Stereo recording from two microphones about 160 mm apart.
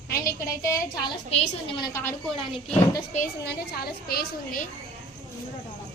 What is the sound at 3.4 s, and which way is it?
A woman's voice, 80° left.